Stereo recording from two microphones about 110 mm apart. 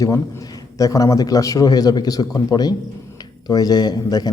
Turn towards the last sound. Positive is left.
turn(degrees=35)  # may be behind; listen again after turning